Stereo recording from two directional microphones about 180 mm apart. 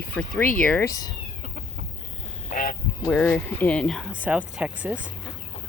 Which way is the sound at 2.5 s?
50° left (ahead or behind).